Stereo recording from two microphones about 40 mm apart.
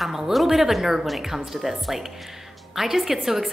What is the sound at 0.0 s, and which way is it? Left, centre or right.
A woman's voice, centre.